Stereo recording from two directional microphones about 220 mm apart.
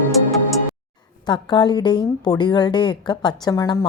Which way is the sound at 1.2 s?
20° left (ahead or behind).